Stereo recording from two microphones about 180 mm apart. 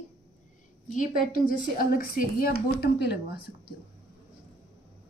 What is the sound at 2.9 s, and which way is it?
Speech, 65° left (ahead or behind).